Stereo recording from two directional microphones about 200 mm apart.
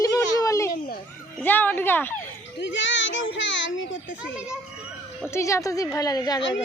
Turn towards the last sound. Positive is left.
turn(degrees=20)  # may be behind; listen again after turning